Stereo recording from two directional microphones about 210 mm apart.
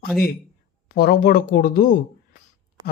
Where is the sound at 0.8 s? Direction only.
45° left (ahead or behind).